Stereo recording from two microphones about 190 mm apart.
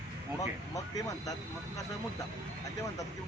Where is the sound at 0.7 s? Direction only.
20° left (ahead or behind).